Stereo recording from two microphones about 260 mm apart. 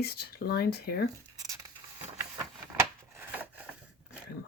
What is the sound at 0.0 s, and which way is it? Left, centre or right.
Speech, left.